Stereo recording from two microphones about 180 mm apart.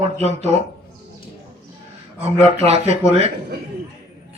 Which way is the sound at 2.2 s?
35° right (ahead or behind).